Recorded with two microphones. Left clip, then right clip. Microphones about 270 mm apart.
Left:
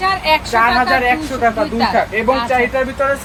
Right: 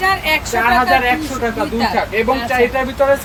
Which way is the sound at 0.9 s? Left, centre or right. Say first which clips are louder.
Even; centre.